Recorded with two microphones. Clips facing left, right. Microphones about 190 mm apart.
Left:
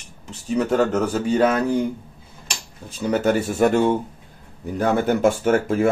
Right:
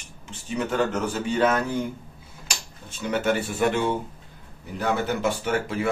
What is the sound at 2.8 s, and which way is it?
Speech, 35° left (ahead or behind).